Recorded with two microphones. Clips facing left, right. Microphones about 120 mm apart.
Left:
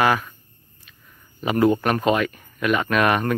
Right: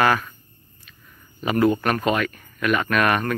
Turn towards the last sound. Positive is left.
turn(degrees=20)  # may be behind; listen again after turning